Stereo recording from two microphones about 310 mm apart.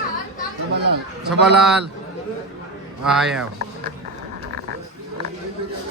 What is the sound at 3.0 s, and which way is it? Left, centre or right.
Speech, centre.